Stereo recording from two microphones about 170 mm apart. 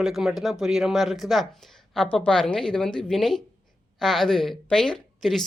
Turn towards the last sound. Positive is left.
turn(degrees=5)  # may be behind; listen again after turning